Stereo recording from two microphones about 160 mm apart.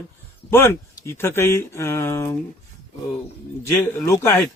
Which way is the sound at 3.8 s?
15° left (ahead or behind).